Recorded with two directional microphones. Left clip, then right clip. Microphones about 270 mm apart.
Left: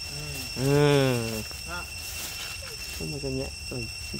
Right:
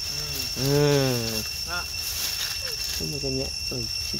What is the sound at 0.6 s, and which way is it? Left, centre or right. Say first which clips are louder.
Speech: even; centre.